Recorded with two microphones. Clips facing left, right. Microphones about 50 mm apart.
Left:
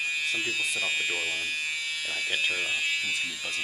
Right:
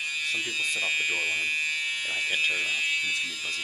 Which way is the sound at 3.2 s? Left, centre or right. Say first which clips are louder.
Even; centre.